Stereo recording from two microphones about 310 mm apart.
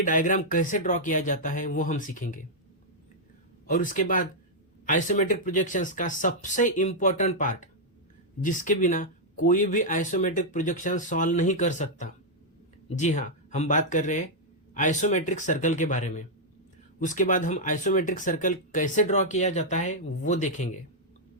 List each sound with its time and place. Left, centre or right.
0.0 s speech: left
3.7 s speech: left